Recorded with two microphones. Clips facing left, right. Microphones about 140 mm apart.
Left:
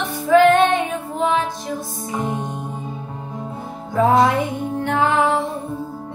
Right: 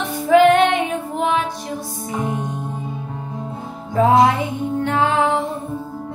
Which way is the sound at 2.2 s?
20° left (ahead or behind).